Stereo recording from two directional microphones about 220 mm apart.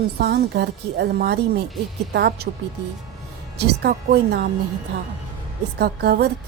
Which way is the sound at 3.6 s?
50° right (ahead or behind).